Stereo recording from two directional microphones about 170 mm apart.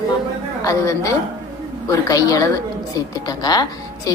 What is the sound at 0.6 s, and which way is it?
Speech, 20° left (ahead or behind).